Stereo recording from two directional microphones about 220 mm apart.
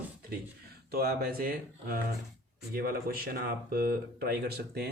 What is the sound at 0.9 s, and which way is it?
Speech, 45° right (ahead or behind).